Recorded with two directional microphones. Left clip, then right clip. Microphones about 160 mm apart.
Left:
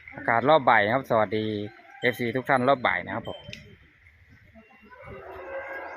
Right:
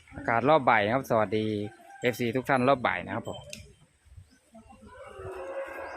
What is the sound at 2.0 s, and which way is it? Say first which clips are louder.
Speech: left 2 dB; 15° right (ahead or behind).